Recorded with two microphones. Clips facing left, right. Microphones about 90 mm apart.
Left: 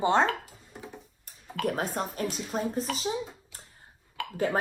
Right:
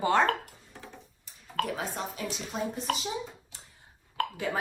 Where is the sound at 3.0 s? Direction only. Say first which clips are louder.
Left 3 dB; 35° left (ahead or behind).